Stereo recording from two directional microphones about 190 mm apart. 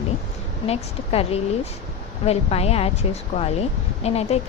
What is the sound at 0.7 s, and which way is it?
A woman's voice, 30° left (ahead or behind).